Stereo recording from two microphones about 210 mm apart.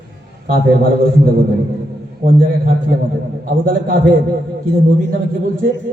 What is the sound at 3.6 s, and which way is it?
Mantra, 40° right (ahead or behind).